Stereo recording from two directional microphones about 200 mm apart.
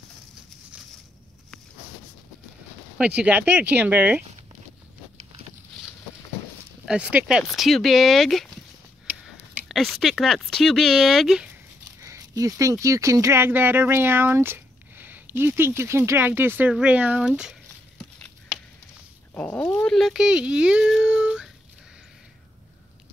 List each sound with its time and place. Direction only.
3.2 s speech: 10° right (ahead or behind)
6.9 s speech: 5° right (ahead or behind)
9.7 s speech: centre (ahead or behind)
12.0 s speech: 15° right (ahead or behind); by 18.3 s centre (ahead or behind)
19.3 s speech: 5° left (ahead or behind)